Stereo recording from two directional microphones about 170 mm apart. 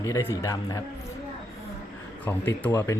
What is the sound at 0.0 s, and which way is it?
Speech, 15° left (ahead or behind).